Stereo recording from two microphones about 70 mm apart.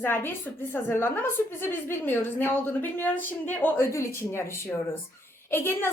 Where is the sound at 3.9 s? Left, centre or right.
Left.